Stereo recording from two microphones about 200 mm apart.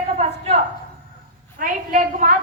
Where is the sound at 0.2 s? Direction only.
30° right (ahead or behind).